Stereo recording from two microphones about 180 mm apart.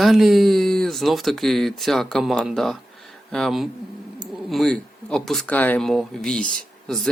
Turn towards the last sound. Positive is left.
turn(degrees=0)  # may be behind; listen again after turning